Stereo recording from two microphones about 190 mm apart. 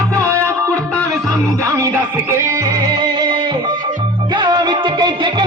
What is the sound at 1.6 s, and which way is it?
Music, 15° right (ahead or behind).